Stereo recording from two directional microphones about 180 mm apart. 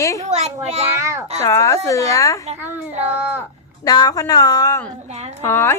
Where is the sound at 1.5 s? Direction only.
15° left (ahead or behind).